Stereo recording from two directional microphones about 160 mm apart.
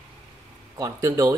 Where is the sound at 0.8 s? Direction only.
20° right (ahead or behind).